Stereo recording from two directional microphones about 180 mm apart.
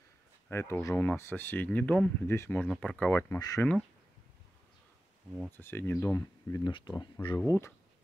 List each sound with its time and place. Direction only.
0.5 s speech: 15° left (ahead or behind)
5.6 s speech: 10° left (ahead or behind)
7.3 s speech: 15° left (ahead or behind)